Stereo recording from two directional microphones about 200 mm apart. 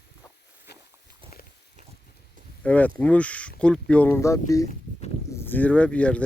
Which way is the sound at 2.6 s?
5° left (ahead or behind).